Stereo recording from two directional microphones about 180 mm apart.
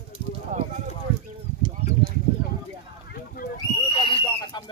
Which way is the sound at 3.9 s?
30° left (ahead or behind).